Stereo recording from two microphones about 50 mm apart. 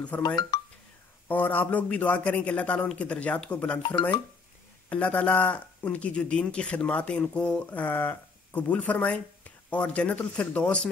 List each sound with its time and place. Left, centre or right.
0.0 s speech: left